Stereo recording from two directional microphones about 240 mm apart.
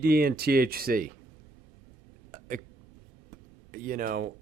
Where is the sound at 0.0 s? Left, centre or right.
Right.